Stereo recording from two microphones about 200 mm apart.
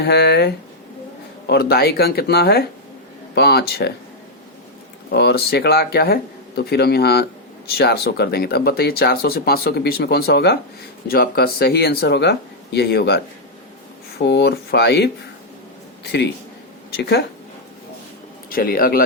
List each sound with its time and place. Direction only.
0.0 s speech: 55° left (ahead or behind)
5.1 s speech: 55° left (ahead or behind)
17.0 s speech: 55° left (ahead or behind)
18.4 s a man's voice: 45° left (ahead or behind)